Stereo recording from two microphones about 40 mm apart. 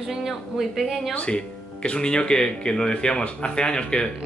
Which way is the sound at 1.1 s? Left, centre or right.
Left.